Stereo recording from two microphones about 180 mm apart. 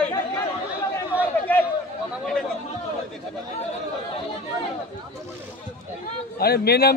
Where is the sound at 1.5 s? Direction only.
10° left (ahead or behind).